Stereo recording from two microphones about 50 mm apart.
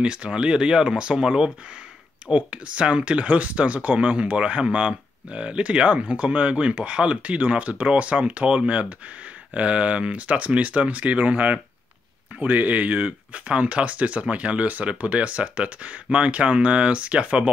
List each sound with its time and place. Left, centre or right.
0.0 s speech: centre